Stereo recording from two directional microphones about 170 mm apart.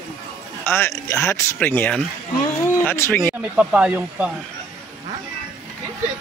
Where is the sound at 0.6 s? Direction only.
15° left (ahead or behind).